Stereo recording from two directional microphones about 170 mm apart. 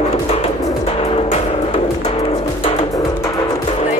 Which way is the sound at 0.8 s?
35° left (ahead or behind).